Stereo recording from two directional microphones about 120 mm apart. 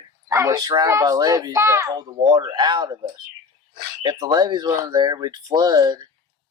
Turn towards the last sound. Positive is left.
turn(degrees=-35)  # may be behind; listen again after turning